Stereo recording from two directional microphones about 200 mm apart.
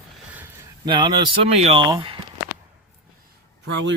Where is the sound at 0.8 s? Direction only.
20° right (ahead or behind).